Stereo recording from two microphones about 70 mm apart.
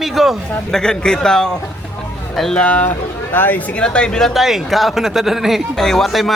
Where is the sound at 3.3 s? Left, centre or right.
Left.